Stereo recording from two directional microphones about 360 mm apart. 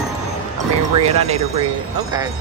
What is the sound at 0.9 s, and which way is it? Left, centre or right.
Speech, centre.